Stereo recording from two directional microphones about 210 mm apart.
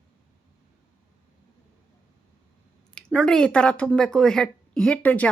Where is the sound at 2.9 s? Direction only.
5° left (ahead or behind).